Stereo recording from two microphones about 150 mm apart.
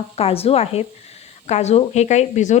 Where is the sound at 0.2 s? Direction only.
40° left (ahead or behind).